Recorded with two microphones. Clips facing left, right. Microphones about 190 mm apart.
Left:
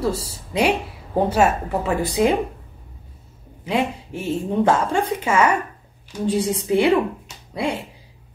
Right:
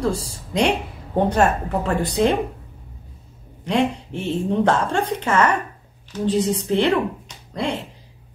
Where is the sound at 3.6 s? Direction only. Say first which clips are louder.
Right 2 dB; 5° left (ahead or behind).